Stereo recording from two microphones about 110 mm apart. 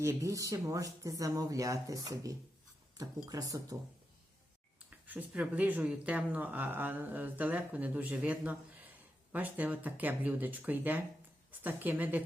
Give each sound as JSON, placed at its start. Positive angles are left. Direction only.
{"t": 0.0, "sound": "speech", "side_deg": -30}
{"t": 4.9, "sound": "a sound", "side_deg": -15}
{"t": 5.3, "sound": "speech", "side_deg": -10}